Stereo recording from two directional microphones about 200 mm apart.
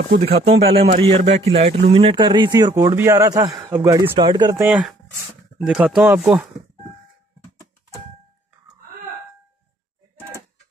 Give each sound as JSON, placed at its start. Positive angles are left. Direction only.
{"t": 0.2, "sound": "a man's voice", "side_deg": -30}
{"t": 4.1, "sound": "a man's voice", "side_deg": -25}
{"t": 5.7, "sound": "speech", "side_deg": 0}